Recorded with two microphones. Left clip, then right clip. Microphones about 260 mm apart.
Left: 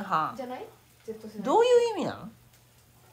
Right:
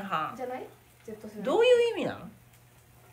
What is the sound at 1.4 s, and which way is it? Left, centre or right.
Speech, centre.